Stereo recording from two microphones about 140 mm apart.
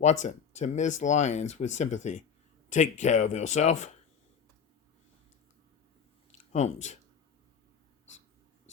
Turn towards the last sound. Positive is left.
turn(degrees=55)  # may be behind; listen again after turning